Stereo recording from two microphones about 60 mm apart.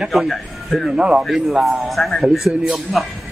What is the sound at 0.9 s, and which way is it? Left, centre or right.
Speech, centre.